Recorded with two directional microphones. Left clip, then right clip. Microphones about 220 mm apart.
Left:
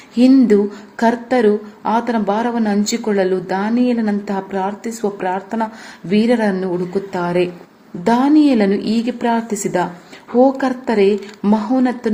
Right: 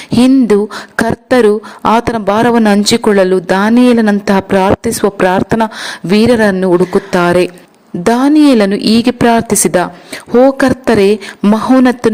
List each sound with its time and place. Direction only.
0.2 s a woman's voice: 45° right (ahead or behind)